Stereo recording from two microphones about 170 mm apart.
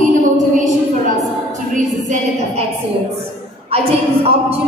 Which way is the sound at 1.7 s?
45° right (ahead or behind).